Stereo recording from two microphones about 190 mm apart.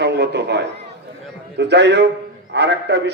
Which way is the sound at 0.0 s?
60° right (ahead or behind).